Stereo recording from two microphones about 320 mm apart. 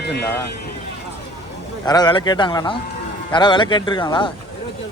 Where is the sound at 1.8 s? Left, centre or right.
Centre.